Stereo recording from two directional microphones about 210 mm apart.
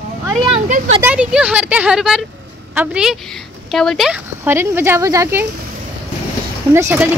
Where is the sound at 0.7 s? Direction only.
30° right (ahead or behind).